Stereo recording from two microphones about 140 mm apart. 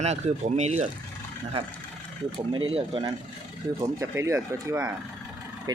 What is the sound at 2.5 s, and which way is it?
Speech, 35° right (ahead or behind).